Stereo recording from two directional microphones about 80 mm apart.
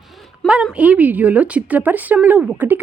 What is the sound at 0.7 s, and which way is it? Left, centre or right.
A woman's voice, centre.